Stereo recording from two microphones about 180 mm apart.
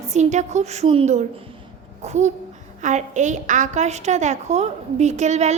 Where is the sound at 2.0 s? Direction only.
40° right (ahead or behind).